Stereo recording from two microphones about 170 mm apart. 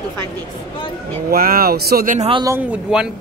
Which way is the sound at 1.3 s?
60° right (ahead or behind).